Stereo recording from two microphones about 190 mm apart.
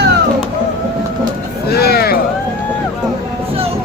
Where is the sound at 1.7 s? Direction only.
55° left (ahead or behind).